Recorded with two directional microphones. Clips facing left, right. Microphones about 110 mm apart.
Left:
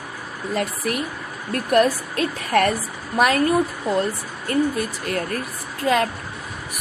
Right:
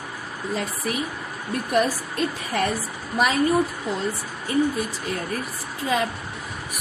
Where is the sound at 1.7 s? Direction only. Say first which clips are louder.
Left 5 dB; 70° left (ahead or behind).